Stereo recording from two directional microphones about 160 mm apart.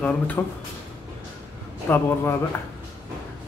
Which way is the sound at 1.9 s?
10° left (ahead or behind).